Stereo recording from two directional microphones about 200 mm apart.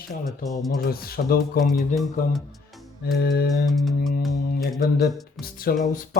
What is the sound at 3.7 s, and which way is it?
Music, centre (ahead or behind).